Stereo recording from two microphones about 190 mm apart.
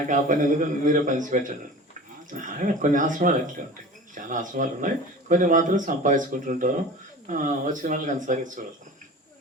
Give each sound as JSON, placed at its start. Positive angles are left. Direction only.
{"t": 0.1, "sound": "speech", "side_deg": -45}